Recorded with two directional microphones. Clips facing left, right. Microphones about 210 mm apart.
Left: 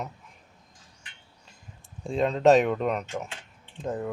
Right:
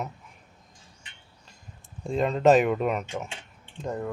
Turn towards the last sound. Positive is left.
turn(degrees=0)  # may be behind; listen again after turning